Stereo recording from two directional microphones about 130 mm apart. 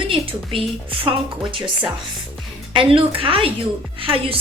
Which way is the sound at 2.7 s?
40° right (ahead or behind).